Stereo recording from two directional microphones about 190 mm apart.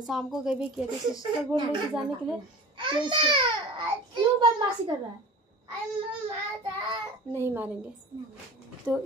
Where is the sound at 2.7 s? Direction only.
25° right (ahead or behind).